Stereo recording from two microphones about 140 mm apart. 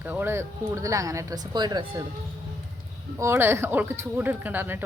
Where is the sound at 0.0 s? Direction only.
15° right (ahead or behind); by 2.0 s 30° right (ahead or behind).